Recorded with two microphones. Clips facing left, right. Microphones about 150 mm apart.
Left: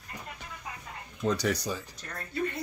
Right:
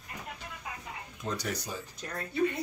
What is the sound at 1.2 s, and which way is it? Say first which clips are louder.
Speech: left 7 dB; 90° left.